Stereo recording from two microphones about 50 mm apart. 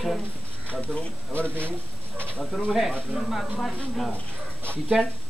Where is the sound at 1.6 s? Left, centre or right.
Right.